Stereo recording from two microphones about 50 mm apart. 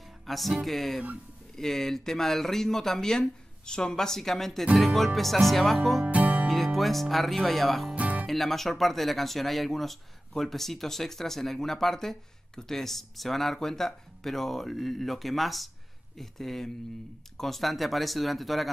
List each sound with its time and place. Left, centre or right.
0.0 s music: centre
1.6 s speech: centre
6.0 s music: right
6.4 s speech: centre
7.9 s music: right
8.3 s speech: centre